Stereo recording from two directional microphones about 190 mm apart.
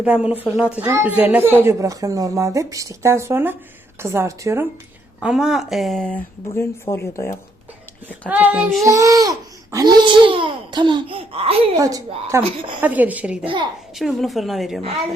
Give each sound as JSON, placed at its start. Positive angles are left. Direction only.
{"t": 0.0, "sound": "speech", "side_deg": -5}
{"t": 5.2, "sound": "speech", "side_deg": -5}
{"t": 6.6, "sound": "speech", "side_deg": 15}
{"t": 8.3, "sound": "speech", "side_deg": -10}
{"t": 11.8, "sound": "speech", "side_deg": -20}